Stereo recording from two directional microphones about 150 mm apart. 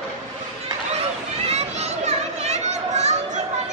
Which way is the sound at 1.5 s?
45° right (ahead or behind).